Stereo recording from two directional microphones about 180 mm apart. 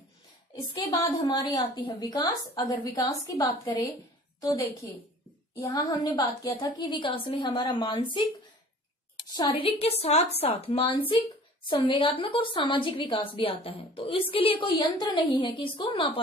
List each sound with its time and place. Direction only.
0.8 s a woman's voice: 20° left (ahead or behind)
9.4 s a woman's voice: 30° left (ahead or behind)